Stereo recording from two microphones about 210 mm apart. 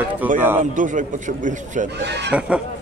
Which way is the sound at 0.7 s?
40° right (ahead or behind).